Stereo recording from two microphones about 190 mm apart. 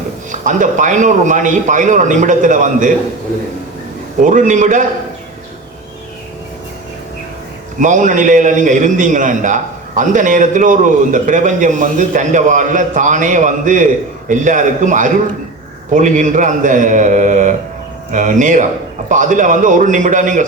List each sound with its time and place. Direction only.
0.3 s a man's voice: 40° right (ahead or behind)
4.2 s a man's voice: 40° right (ahead or behind)
7.8 s a man's voice: 40° right (ahead or behind)